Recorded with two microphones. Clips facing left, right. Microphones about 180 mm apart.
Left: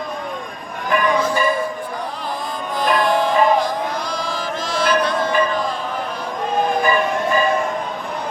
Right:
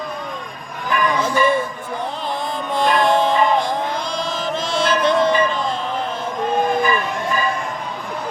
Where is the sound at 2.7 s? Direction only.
25° right (ahead or behind).